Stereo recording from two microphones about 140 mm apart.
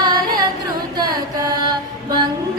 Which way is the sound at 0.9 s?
25° right (ahead or behind).